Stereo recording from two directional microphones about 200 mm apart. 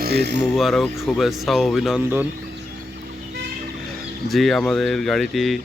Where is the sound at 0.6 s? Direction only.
Centre (ahead or behind).